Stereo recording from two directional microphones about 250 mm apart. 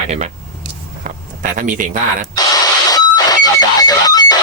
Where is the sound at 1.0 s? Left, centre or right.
Right.